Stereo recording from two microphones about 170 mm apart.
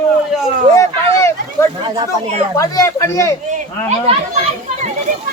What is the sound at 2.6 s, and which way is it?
Speech, 20° left (ahead or behind).